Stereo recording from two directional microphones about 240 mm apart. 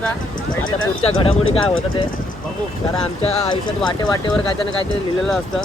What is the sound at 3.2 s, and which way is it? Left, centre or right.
Speech, left.